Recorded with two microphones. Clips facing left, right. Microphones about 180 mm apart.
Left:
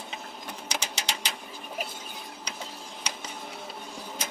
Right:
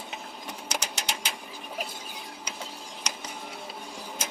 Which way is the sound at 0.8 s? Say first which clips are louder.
Even; 5° right (ahead or behind).